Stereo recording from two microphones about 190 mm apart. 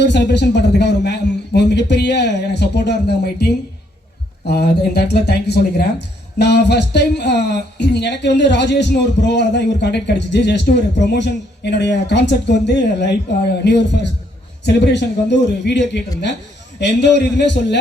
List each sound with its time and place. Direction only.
0.0 s speech: 65° left (ahead or behind)
4.4 s speech: 60° left (ahead or behind)